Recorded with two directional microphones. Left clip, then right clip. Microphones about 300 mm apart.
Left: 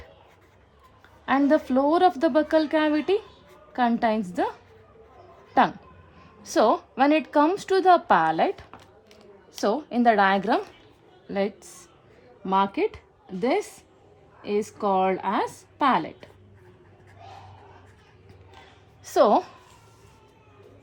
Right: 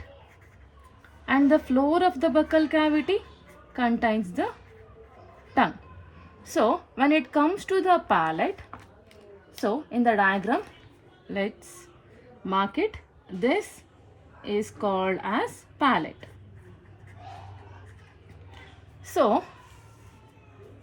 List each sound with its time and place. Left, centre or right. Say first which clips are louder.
1.2 s a woman's voice: even; centre
6.5 s a woman's voice: left 3 dB; centre
19.0 s a woman's voice: left 4 dB; centre